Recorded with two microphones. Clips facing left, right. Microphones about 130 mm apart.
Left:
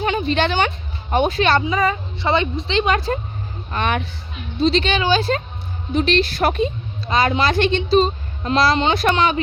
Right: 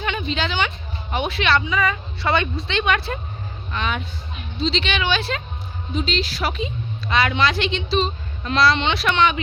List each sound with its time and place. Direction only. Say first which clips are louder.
0.0 s a sound: left 6 dB; 40° left (ahead or behind)
0.3 s a woman's voice: left 4 dB; 55° left (ahead or behind); by 3.2 s 35° left (ahead or behind)
3.7 s speech: left 4 dB; 55° left (ahead or behind)
5.9 s speech: left 6 dB; 60° left (ahead or behind)
7.1 s a woman's voice: left 2 dB; 35° left (ahead or behind)